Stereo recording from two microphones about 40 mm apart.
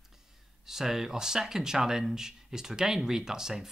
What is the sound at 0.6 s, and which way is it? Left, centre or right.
Speech, centre.